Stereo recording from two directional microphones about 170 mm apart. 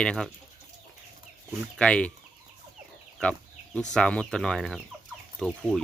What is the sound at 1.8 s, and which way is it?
Speech, 5° left (ahead or behind).